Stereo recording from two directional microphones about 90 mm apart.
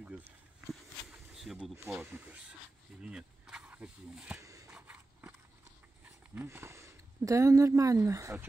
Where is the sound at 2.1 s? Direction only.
15° right (ahead or behind).